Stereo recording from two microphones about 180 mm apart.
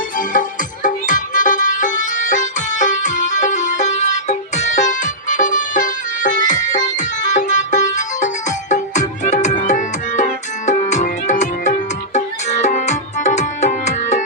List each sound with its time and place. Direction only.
0.2 s music: 50° left (ahead or behind)